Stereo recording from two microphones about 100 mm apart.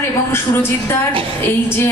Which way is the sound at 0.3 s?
25° left (ahead or behind).